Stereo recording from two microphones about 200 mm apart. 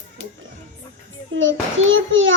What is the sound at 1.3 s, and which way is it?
Child singing, 70° right (ahead or behind).